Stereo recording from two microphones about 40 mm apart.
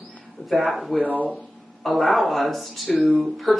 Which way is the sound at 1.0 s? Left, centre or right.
Right.